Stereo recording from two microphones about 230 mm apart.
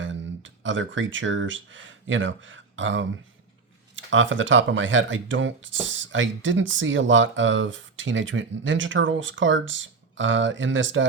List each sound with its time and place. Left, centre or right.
0.0 s speech: right